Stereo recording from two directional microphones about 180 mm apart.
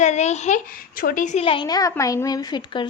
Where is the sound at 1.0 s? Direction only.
50° left (ahead or behind).